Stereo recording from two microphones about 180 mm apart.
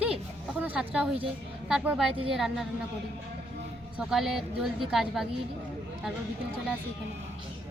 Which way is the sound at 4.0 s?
Centre (ahead or behind).